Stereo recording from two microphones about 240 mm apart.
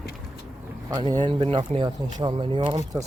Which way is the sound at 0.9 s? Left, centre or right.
Centre.